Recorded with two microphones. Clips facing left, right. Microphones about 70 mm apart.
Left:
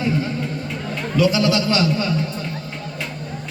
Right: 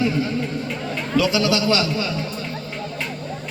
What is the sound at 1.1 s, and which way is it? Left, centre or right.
Music, left.